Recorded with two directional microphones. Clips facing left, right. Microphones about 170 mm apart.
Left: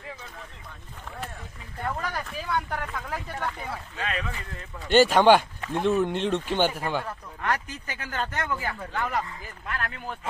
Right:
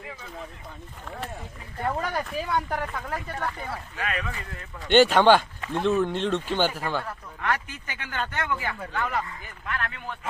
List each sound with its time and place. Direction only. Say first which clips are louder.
1.8 s speech: right 3 dB; 15° right (ahead or behind); by 3.8 s centre (ahead or behind)
3.9 s speech: even; 25° left (ahead or behind)
4.9 s speech: even; 5° left (ahead or behind)
7.4 s speech: even; 40° left (ahead or behind)
8.9 s speech: right 1 dB; 10° left (ahead or behind)
9.6 s speech: right 1 dB; 35° left (ahead or behind)